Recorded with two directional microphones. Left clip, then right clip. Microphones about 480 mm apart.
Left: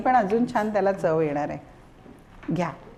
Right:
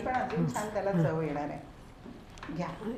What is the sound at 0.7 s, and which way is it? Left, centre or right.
Speech, left.